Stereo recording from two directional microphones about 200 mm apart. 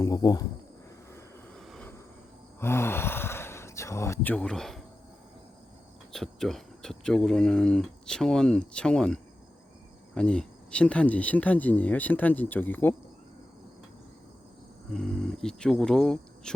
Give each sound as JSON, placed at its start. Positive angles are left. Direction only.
{"t": 0.0, "sound": "speech", "side_deg": 20}
{"t": 1.5, "sound": "a sound", "side_deg": 0}
{"t": 2.6, "sound": "speech", "side_deg": 10}
{"t": 6.1, "sound": "speech", "side_deg": 0}
{"t": 10.2, "sound": "speech", "side_deg": 5}
{"t": 14.9, "sound": "speech", "side_deg": 0}